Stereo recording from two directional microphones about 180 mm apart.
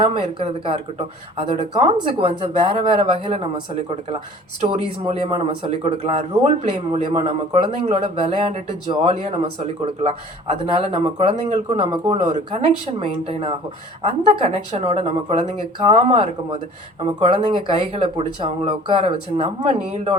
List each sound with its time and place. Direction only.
0.0 s speech: 30° right (ahead or behind)
5.0 s speech: 35° right (ahead or behind)